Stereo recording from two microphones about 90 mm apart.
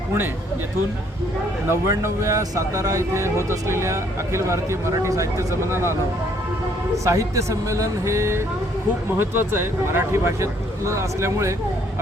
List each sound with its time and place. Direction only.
1.9 s speech: 35° right (ahead or behind)